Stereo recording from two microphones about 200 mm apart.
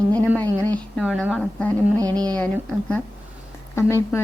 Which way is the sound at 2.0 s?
20° right (ahead or behind).